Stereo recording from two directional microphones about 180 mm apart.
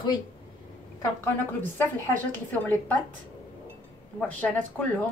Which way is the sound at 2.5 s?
10° left (ahead or behind).